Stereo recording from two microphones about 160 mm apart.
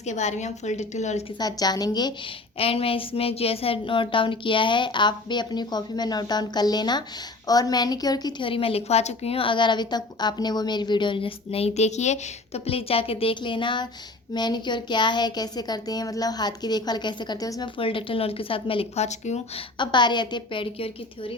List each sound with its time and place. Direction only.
0.0 s a woman's voice: 45° left (ahead or behind)
1.4 s speech: 25° left (ahead or behind)
2.6 s a woman's voice: 35° left (ahead or behind)
19.8 s speech: 30° left (ahead or behind)